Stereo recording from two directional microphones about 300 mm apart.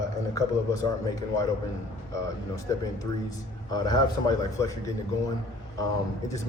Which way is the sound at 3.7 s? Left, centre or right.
Centre.